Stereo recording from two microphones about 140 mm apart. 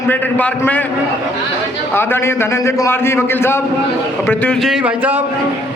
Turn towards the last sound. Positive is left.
turn(degrees=-10)  # may be behind; listen again after turning